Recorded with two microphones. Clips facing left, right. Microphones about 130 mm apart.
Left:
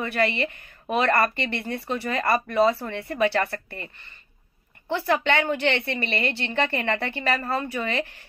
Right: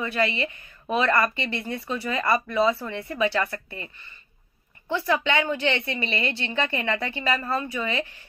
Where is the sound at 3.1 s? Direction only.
45° left (ahead or behind).